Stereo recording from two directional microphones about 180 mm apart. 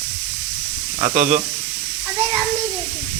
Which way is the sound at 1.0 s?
40° right (ahead or behind).